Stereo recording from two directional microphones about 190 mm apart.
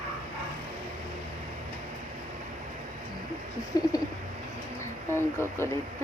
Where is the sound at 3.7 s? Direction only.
20° left (ahead or behind).